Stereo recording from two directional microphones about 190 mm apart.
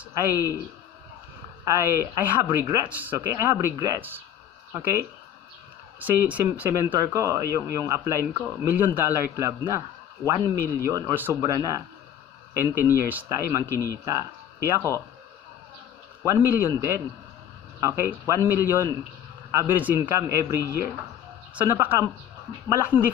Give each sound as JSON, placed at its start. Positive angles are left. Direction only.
{"t": 0.3, "sound": "a man's voice", "side_deg": -10}
{"t": 1.7, "sound": "a man's voice", "side_deg": -15}
{"t": 5.9, "sound": "a man's voice", "side_deg": -10}
{"t": 14.6, "sound": "speech", "side_deg": 15}
{"t": 16.3, "sound": "a man's voice", "side_deg": -15}